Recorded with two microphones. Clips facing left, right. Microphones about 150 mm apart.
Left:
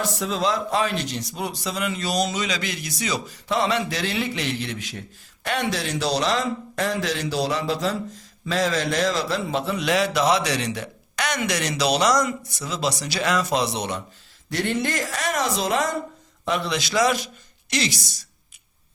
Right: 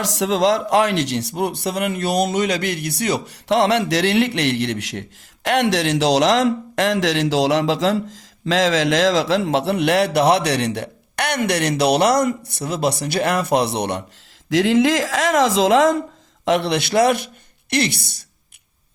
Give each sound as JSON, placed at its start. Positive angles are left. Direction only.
{"t": 0.0, "sound": "a man's voice", "side_deg": -90}
{"t": 14.5, "sound": "speech", "side_deg": -90}
{"t": 16.5, "sound": "a man's voice", "side_deg": -70}